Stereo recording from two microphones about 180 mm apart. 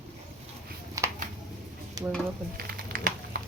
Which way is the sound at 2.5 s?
55° right (ahead or behind).